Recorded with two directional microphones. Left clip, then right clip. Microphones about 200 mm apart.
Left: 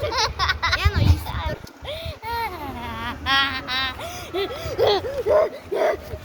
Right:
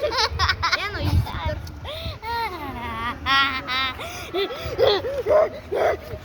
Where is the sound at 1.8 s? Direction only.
Centre (ahead or behind).